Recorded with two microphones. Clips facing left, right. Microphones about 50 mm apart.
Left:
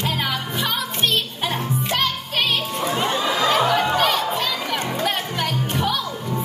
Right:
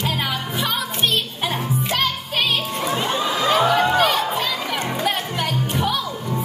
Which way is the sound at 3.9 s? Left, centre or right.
Centre.